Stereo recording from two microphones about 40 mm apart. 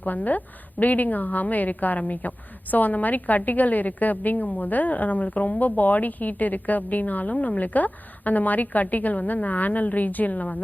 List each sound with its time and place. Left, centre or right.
0.0 s a woman's voice: left